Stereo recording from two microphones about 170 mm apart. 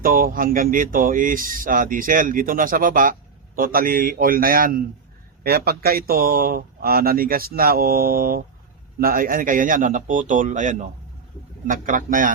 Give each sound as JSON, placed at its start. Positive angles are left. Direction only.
{"t": 0.0, "sound": "a man's voice", "side_deg": -55}